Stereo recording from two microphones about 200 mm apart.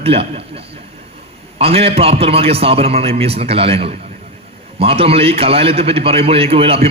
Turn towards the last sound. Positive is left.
turn(degrees=-30)  # may be behind; listen again after turning